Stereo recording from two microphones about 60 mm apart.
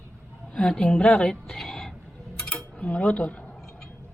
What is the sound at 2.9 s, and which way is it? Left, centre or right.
Speech, centre.